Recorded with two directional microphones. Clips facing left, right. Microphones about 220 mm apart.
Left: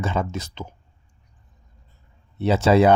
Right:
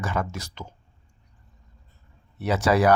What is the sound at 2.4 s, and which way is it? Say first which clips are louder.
Speech: left 4 dB; 25° left (ahead or behind).